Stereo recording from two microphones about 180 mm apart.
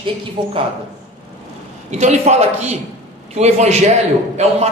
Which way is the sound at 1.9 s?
40° right (ahead or behind).